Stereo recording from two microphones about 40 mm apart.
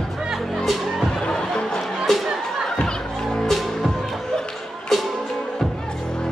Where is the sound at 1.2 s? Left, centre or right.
Centre.